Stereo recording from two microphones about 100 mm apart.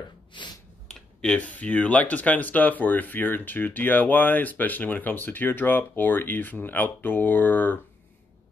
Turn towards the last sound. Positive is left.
turn(degrees=20)  # may be behind; listen again after turning